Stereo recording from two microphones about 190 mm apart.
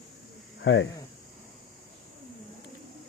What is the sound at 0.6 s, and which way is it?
Speech, 75° left (ahead or behind).